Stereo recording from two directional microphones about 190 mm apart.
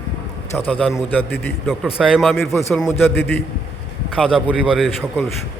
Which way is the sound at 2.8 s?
15° left (ahead or behind).